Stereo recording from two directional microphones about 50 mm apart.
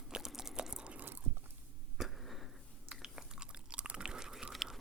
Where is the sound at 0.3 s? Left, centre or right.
Centre.